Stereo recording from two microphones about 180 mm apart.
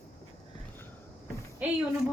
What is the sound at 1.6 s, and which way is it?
Speech, 10° right (ahead or behind).